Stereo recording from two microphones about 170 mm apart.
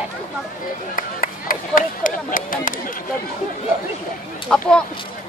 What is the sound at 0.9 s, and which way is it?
Speech, 55° left (ahead or behind).